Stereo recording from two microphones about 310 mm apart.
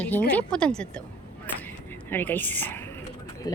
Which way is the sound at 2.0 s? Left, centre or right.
Centre.